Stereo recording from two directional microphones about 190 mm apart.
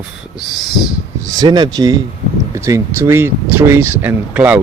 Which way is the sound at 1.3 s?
20° right (ahead or behind).